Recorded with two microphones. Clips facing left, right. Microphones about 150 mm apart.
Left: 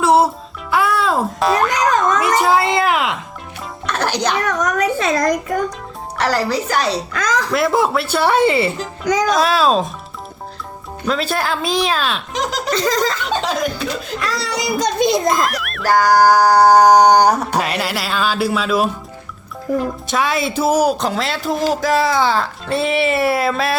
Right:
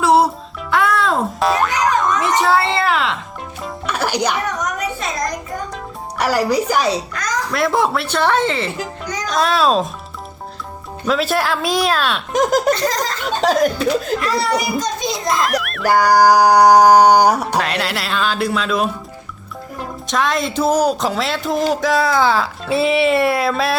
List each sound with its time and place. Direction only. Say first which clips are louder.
0.0 s music: even; centre (ahead or behind)
0.7 s boing: even; 5° left (ahead or behind)
3.6 s music: even; 10° right (ahead or behind)
4.4 s a sound: left 5 dB; 90° left
6.1 s a sound: right 2 dB; 10° right (ahead or behind)
7.1 s a child's voice: left 3 dB; 90° left
7.5 s speech: even; centre (ahead or behind)
11.0 s speech: right 2 dB; centre (ahead or behind)
12.3 s speech: right 10 dB; 50° right (ahead or behind)
14.3 s a child's voice: right 3 dB; 90° left; by 15.4 s 55° left (ahead or behind)
15.4 s music: right 1 dB; centre (ahead or behind)
15.9 s a sound: even; 10° right (ahead or behind)
17.6 s speech: even; 5° left (ahead or behind)